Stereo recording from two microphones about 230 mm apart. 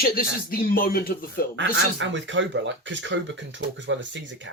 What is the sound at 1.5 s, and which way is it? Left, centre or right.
Speech, right.